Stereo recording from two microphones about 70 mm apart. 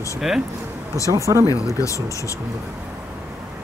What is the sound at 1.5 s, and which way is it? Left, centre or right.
Speech, left.